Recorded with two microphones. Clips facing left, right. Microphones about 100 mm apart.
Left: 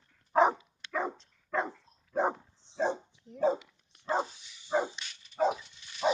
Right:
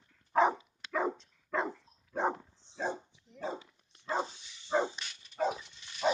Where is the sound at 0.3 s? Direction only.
20° left (ahead or behind).